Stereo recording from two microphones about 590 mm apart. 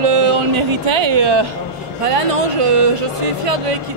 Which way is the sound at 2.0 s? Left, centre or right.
Right.